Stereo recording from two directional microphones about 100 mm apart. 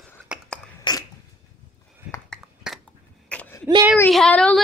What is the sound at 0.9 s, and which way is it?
Sneeze, 45° left (ahead or behind).